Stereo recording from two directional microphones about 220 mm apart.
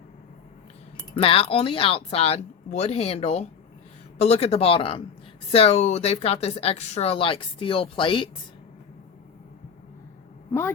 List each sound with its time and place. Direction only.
1.2 s speech: 25° left (ahead or behind)